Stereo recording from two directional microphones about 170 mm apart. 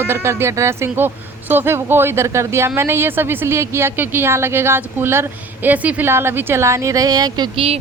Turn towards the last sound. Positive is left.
turn(degrees=-35)  # may be behind; listen again after turning